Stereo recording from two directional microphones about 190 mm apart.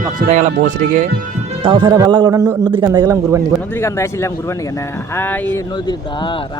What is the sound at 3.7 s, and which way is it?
Speech, 15° left (ahead or behind).